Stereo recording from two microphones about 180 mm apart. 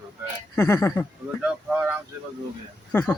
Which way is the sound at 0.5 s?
15° left (ahead or behind).